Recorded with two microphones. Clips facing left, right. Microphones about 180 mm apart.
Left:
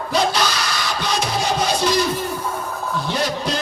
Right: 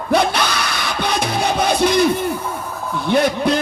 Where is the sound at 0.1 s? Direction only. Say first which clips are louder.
Right 3 dB; 55° right (ahead or behind).